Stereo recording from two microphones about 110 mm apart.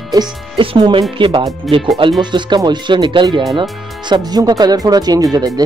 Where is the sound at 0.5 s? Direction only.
55° right (ahead or behind).